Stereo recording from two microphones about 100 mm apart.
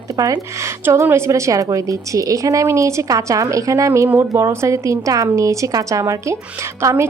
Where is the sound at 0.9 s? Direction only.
25° right (ahead or behind).